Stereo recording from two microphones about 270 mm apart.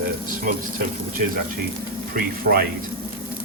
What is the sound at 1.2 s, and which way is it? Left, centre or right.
Speech, right.